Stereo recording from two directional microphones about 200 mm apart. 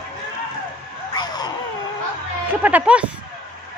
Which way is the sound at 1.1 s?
20° left (ahead or behind).